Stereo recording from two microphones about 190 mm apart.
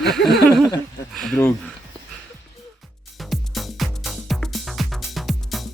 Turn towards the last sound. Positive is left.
turn(degrees=0)  # may be behind; listen again after turning